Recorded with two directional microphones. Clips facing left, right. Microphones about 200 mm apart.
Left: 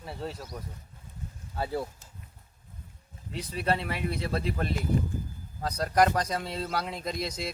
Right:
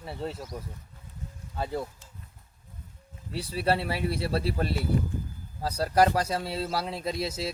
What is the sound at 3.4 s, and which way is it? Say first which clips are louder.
Speech: right 2 dB; 35° right (ahead or behind).